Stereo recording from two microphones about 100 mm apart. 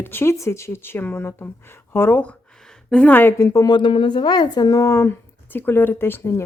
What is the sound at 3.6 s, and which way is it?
Speech, 55° left (ahead or behind).